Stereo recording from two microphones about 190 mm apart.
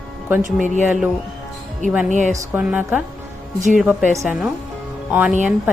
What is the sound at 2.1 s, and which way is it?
Speech, 40° right (ahead or behind).